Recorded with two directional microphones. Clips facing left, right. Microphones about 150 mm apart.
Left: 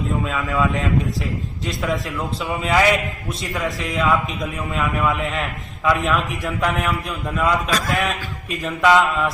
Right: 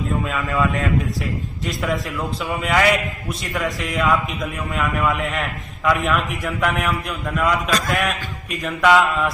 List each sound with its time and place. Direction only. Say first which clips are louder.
0.3 s a man's voice: even; centre (ahead or behind)